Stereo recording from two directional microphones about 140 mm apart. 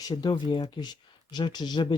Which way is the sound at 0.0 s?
30° left (ahead or behind).